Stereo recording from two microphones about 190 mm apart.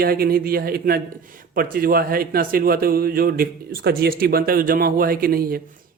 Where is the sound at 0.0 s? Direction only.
50° right (ahead or behind).